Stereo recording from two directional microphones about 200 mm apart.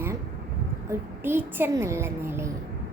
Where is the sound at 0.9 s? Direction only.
10° right (ahead or behind).